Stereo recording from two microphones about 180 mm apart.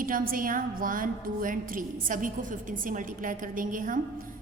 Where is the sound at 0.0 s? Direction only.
50° right (ahead or behind).